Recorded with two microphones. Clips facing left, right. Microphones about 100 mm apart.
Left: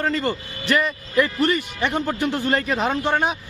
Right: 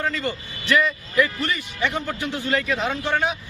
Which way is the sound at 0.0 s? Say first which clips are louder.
Left 3 dB; 45° left (ahead or behind).